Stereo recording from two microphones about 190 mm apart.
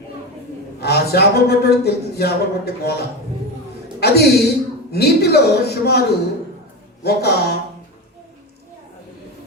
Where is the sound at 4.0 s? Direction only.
60° left (ahead or behind).